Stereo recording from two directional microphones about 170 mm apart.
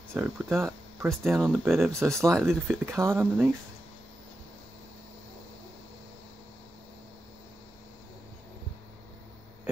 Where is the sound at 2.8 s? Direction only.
15° right (ahead or behind).